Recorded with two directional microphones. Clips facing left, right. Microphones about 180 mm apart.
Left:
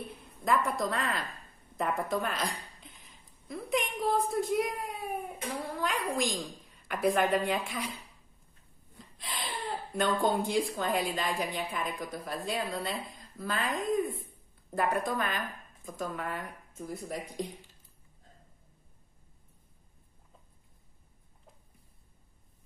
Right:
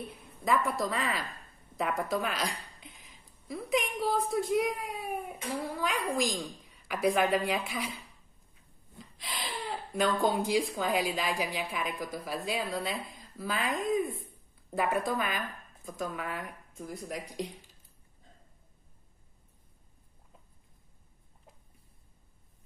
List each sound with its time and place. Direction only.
0.1 s a sound: centre (ahead or behind)
0.7 s a woman's voice: centre (ahead or behind)
8.9 s gasp: centre (ahead or behind)
10.2 s a woman's voice: 5° right (ahead or behind)